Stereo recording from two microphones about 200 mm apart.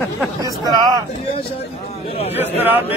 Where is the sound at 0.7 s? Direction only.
20° right (ahead or behind).